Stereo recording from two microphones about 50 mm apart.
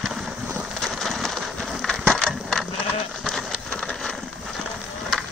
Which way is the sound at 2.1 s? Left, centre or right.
Centre.